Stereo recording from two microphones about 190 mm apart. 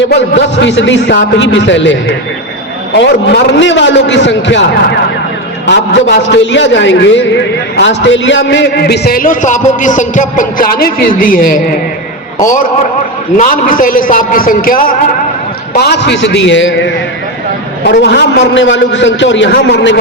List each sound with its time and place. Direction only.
0.1 s a man's voice: 70° left (ahead or behind); by 11.6 s 45° left (ahead or behind)
13.3 s a man's voice: 45° left (ahead or behind)
15.7 s a man's voice: 60° left (ahead or behind); by 16.9 s 75° left (ahead or behind)
17.8 s a man's voice: 60° left (ahead or behind)